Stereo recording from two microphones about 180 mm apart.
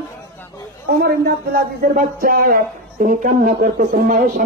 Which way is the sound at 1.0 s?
55° right (ahead or behind).